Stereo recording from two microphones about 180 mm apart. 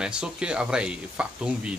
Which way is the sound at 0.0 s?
5° right (ahead or behind).